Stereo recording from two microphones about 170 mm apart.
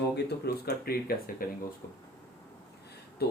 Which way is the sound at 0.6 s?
65° left (ahead or behind).